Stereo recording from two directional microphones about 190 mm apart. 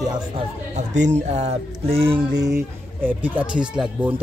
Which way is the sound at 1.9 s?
25° right (ahead or behind).